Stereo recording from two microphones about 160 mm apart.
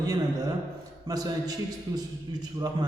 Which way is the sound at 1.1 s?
25° right (ahead or behind).